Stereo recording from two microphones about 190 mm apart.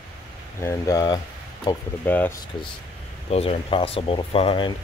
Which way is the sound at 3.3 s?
30° left (ahead or behind).